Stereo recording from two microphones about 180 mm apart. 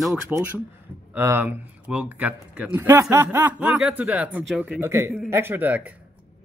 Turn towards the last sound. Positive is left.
turn(degrees=-10)  # may be behind; listen again after turning